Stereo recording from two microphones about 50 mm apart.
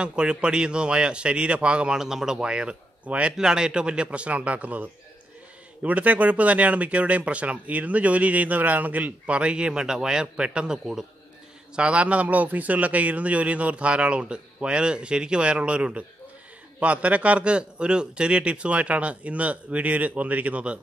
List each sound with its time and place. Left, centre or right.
0.0 s speech: centre
2.0 s a man's voice: centre; by 20.8 s right